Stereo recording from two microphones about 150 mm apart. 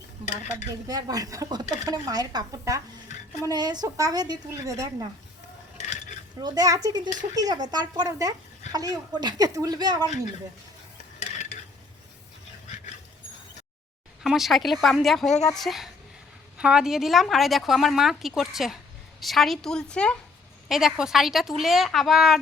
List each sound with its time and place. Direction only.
0.5 s speech: 25° right (ahead or behind)
6.4 s speech: 25° right (ahead or behind)
14.3 s a woman's voice: centre (ahead or behind)